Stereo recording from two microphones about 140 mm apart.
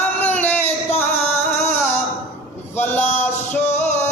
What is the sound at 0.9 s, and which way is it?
Music, 50° left (ahead or behind).